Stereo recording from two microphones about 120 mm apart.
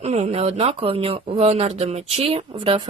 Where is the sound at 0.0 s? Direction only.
65° right (ahead or behind).